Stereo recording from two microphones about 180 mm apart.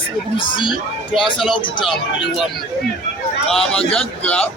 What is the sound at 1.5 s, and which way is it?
Speech, 25° left (ahead or behind).